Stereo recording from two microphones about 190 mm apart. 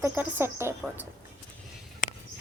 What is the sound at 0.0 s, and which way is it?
Speech, 10° right (ahead or behind).